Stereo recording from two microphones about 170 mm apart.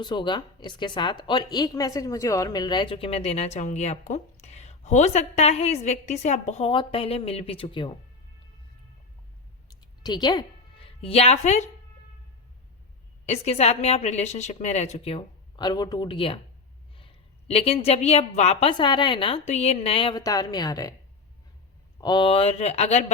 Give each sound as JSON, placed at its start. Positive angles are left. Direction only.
{"t": 0.0, "sound": "speech", "side_deg": 25}
{"t": 9.6, "sound": "music", "side_deg": 25}
{"t": 13.2, "sound": "speech", "side_deg": 40}
{"t": 17.5, "sound": "speech", "side_deg": 35}
{"t": 18.7, "sound": "a woman's voice", "side_deg": 25}
{"t": 22.0, "sound": "speech", "side_deg": 25}